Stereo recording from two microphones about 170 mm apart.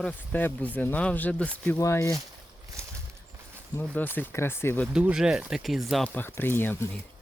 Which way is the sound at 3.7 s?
10° left (ahead or behind).